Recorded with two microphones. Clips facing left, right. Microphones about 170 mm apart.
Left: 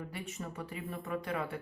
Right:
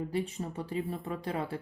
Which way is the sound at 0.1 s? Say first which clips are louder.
Right 8 dB; 30° right (ahead or behind).